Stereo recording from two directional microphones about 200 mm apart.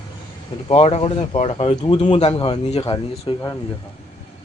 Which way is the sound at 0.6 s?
30° left (ahead or behind).